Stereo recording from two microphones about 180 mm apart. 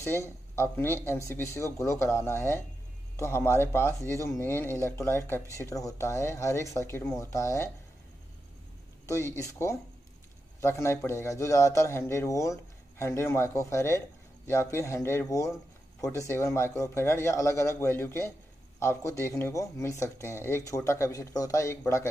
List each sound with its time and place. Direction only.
0.0 s speech: 15° left (ahead or behind)
9.0 s speech: 15° left (ahead or behind)